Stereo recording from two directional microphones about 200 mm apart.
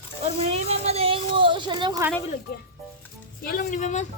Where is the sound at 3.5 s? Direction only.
45° left (ahead or behind).